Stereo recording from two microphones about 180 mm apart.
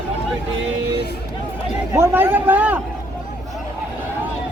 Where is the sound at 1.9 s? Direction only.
10° right (ahead or behind).